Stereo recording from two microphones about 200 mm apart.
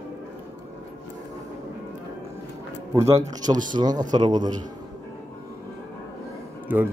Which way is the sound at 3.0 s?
20° right (ahead or behind).